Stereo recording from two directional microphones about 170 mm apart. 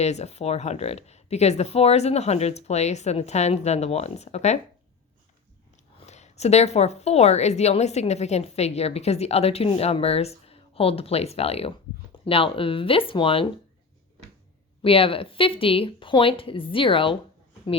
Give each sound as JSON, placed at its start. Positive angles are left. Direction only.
{"t": 0.0, "sound": "a woman's voice", "side_deg": 40}
{"t": 6.1, "sound": "a woman's voice", "side_deg": 40}
{"t": 14.8, "sound": "a woman's voice", "side_deg": 35}